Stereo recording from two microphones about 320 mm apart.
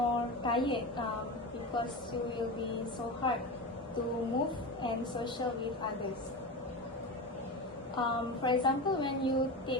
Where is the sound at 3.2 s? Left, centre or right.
Centre.